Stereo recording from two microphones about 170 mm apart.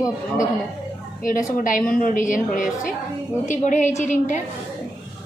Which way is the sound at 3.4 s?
45° left (ahead or behind).